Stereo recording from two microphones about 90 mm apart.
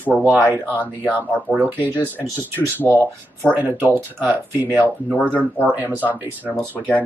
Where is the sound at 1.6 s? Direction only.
20° right (ahead or behind).